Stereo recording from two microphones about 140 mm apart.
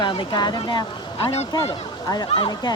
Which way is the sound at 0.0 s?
35° left (ahead or behind).